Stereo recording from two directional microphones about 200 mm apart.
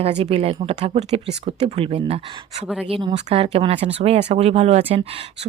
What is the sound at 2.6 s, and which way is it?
Speech, 5° right (ahead or behind).